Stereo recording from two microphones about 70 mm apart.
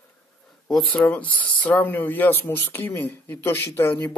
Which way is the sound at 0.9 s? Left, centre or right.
Left.